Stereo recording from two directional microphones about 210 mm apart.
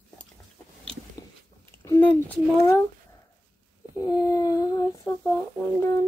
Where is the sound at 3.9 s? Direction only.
20° left (ahead or behind).